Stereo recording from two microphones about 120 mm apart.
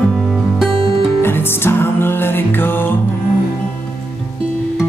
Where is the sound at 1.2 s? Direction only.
20° left (ahead or behind).